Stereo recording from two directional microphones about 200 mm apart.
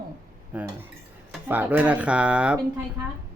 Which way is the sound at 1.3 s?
10° right (ahead or behind).